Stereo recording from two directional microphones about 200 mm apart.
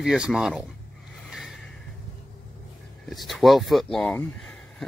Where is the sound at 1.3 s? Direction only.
Centre (ahead or behind).